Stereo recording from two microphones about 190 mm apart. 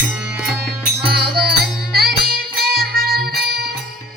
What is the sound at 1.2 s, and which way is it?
Music, 55° right (ahead or behind).